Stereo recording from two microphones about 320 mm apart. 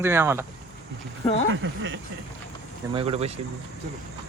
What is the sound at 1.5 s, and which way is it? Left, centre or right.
Speech, right.